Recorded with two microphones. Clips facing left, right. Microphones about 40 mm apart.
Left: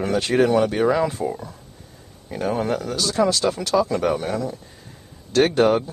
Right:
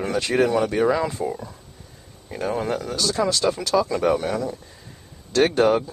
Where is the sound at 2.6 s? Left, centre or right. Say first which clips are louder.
Left 2 dB; left.